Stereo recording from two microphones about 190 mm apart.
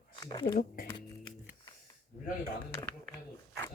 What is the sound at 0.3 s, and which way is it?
Speech, 30° left (ahead or behind).